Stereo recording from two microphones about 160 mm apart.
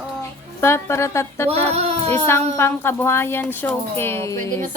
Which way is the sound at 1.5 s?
40° right (ahead or behind).